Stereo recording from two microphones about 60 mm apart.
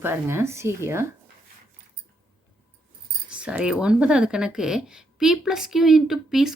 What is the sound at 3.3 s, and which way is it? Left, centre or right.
Speech, centre.